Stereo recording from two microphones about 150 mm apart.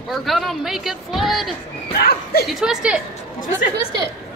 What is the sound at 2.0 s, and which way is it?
Speech, 90° left.